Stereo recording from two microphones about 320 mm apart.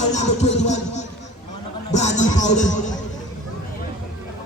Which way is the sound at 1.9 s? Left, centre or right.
Left.